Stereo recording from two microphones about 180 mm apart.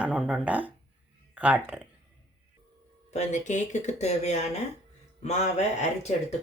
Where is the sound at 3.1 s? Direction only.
40° left (ahead or behind).